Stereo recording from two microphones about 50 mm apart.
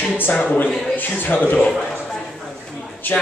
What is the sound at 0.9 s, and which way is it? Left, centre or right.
Speech, left.